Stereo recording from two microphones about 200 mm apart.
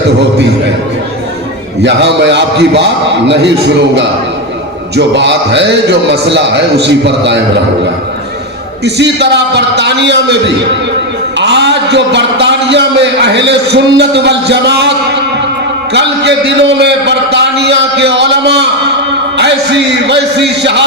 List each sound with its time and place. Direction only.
1.8 s a man's voice: 60° right (ahead or behind)
8.8 s a man's voice: 60° right (ahead or behind)